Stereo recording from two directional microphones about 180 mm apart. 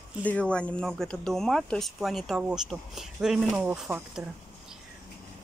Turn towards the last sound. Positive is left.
turn(degrees=-5)  # may be behind; listen again after turning